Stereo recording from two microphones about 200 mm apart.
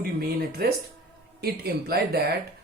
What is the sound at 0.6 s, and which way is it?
Speech, 50° right (ahead or behind).